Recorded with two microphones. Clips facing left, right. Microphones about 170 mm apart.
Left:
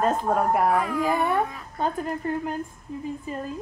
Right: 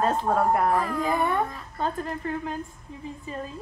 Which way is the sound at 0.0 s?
5° left (ahead or behind).